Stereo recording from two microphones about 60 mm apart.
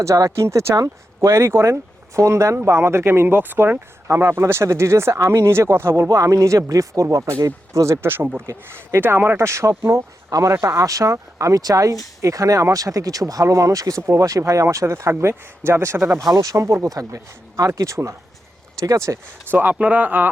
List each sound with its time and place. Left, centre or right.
0.0 s speech: right
0.8 s speech: right
6.1 s speech: right
8.0 s speech: right
8.4 s speech: right
9.0 s speech: right
14.1 s speech: right
15.2 s speech: right
19.5 s speech: right